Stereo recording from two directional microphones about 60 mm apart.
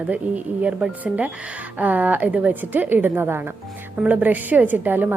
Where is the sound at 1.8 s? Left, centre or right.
Right.